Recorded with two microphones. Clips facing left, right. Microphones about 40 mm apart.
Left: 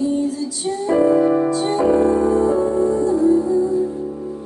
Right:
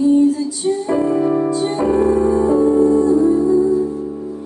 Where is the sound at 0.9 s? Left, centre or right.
Centre.